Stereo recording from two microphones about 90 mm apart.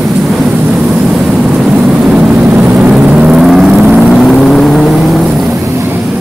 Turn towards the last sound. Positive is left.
turn(degrees=-30)  # may be behind; listen again after turning